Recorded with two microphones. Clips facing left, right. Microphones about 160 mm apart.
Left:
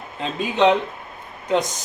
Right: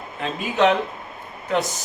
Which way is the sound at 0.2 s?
20° left (ahead or behind).